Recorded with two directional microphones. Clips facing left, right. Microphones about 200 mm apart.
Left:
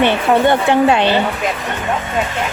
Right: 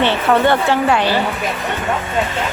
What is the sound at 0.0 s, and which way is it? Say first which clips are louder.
Speech: left 1 dB; 15° left (ahead or behind).